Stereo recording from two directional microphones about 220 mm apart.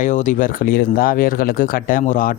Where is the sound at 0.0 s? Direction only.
35° left (ahead or behind).